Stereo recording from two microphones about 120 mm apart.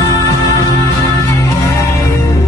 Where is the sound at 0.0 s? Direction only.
25° left (ahead or behind).